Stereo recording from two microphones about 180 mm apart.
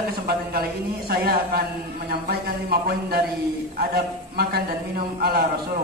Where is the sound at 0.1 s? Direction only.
60° right (ahead or behind).